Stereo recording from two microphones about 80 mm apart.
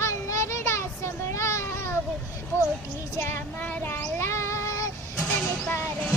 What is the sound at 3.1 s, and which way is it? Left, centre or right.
Child singing, left.